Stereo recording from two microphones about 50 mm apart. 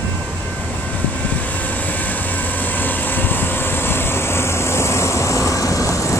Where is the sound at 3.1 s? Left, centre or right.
Left.